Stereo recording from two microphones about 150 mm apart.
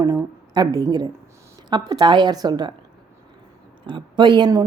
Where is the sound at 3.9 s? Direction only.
30° right (ahead or behind).